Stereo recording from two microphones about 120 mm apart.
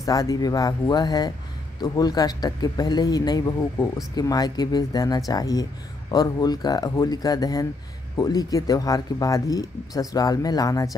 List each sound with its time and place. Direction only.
0.0 s speech: 30° left (ahead or behind)